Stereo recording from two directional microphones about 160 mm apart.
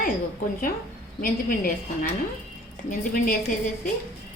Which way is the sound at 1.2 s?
70° left (ahead or behind).